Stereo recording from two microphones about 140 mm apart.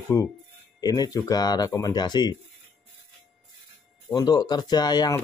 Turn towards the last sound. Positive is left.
turn(degrees=25)  # may be behind; listen again after turning